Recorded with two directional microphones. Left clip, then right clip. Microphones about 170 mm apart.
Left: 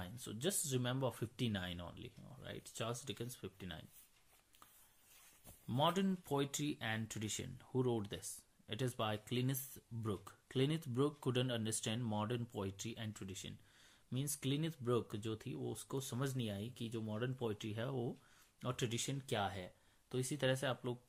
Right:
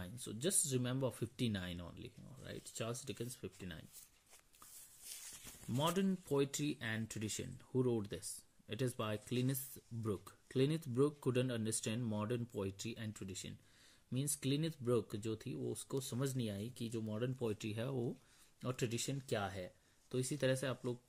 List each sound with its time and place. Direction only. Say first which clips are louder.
0.0 s speech: even; 20° right (ahead or behind)
5.7 s speech: left 2 dB; 20° right (ahead or behind); by 18.1 s 35° right (ahead or behind)
18.6 s speech: even; 20° right (ahead or behind)